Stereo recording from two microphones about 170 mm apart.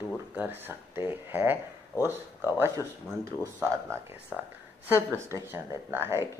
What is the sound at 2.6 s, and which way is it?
Speech, 15° right (ahead or behind).